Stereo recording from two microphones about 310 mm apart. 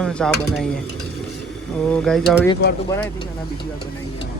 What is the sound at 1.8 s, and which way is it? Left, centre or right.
Speech, centre.